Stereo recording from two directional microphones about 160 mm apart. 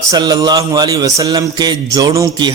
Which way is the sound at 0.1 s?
25° right (ahead or behind).